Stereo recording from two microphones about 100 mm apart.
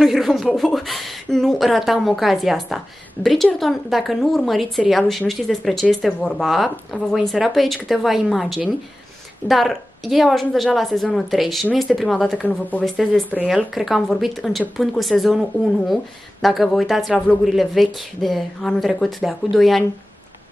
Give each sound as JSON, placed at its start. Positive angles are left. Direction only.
{"t": 0.0, "sound": "a woman's voice", "side_deg": 0}
{"t": 12.4, "sound": "speech", "side_deg": 15}
{"t": 12.8, "sound": "a woman's voice", "side_deg": 5}